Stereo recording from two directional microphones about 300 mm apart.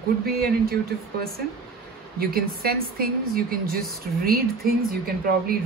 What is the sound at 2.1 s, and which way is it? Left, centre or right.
A woman's voice, right.